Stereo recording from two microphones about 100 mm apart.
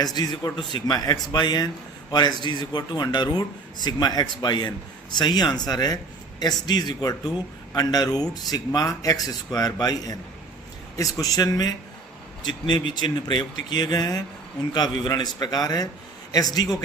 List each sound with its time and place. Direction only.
0.0 s a man's voice: 40° left (ahead or behind)
12.5 s a man's voice: 50° left (ahead or behind)